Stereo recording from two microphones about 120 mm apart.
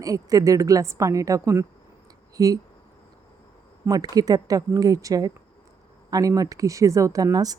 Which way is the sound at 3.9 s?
30° right (ahead or behind).